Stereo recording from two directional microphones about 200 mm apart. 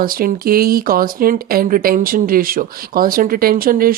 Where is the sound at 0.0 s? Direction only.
45° right (ahead or behind).